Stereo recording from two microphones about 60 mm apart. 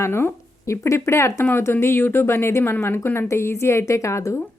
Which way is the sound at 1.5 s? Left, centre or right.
Left.